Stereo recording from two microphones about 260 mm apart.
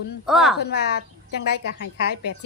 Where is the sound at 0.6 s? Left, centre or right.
Left.